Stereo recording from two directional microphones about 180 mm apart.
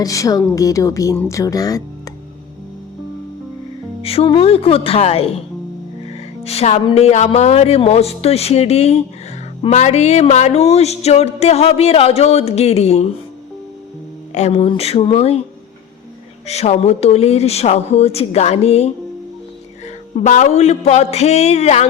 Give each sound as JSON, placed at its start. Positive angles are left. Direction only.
{"t": 0.0, "sound": "speech", "side_deg": 20}
{"t": 4.0, "sound": "music", "side_deg": 30}
{"t": 6.4, "sound": "music", "side_deg": 35}
{"t": 14.3, "sound": "music", "side_deg": 35}
{"t": 16.5, "sound": "music", "side_deg": 35}